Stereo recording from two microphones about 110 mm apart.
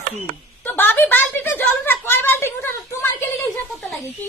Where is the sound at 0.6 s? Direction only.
15° left (ahead or behind).